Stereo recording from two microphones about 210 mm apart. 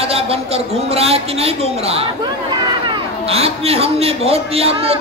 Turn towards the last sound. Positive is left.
turn(degrees=-30)  # may be behind; listen again after turning